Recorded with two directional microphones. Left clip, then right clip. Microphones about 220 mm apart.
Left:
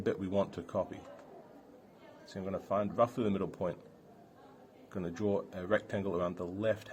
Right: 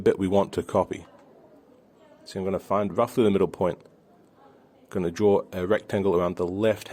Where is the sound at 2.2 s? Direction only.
50° right (ahead or behind).